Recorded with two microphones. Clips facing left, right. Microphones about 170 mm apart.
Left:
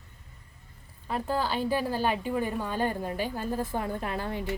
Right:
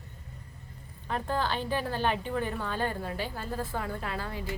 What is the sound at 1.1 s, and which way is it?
A woman's voice, 10° left (ahead or behind).